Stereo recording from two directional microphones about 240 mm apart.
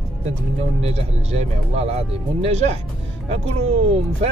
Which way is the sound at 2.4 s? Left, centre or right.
Right.